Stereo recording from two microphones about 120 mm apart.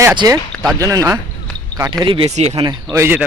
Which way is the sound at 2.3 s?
60° right (ahead or behind).